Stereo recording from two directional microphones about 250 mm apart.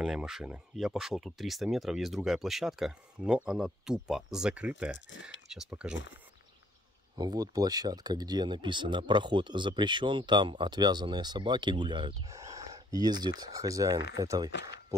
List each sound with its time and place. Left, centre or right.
0.0 s speech: centre
7.2 s speech: centre